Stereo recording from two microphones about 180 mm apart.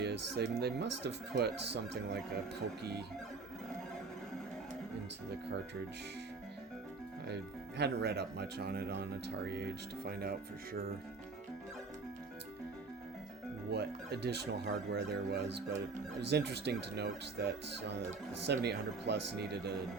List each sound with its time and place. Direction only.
0.0 s speech: 65° right (ahead or behind)
7.8 s speech: 65° right (ahead or behind)
13.7 s speech: 65° right (ahead or behind)
18.4 s speech: 70° right (ahead or behind)